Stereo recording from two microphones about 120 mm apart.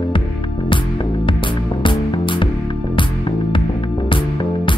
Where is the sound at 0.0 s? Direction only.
45° left (ahead or behind).